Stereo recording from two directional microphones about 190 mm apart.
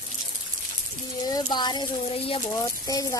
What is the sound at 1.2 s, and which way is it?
Speech, 20° left (ahead or behind).